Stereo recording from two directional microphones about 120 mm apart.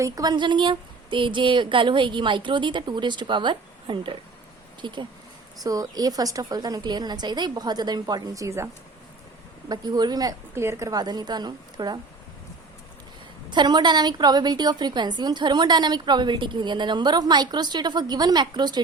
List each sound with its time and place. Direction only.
0.0 s a woman's voice: 35° right (ahead or behind)
10.5 s a woman's voice: 20° right (ahead or behind)
13.5 s a woman's voice: 40° right (ahead or behind)